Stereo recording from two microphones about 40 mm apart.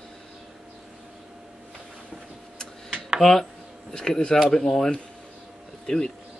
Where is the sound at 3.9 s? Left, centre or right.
Centre.